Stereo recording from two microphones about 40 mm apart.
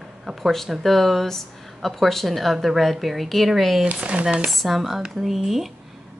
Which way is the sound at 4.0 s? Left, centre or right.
Right.